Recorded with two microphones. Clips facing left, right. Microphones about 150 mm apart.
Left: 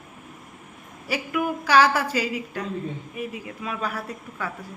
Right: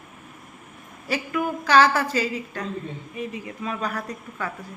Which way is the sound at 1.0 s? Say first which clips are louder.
Even; 10° left (ahead or behind).